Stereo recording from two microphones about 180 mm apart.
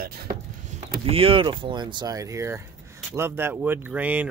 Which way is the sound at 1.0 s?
30° right (ahead or behind).